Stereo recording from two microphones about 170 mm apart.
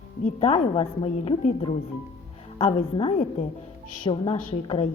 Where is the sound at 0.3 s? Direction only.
35° left (ahead or behind).